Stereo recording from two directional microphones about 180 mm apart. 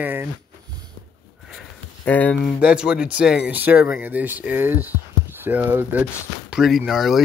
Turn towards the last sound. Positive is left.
turn(degrees=0)  # may be behind; listen again after turning